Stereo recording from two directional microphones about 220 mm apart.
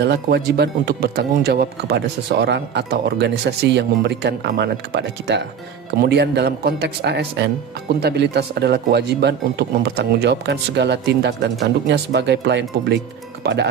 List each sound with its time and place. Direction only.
0.0 s speech: 50° right (ahead or behind)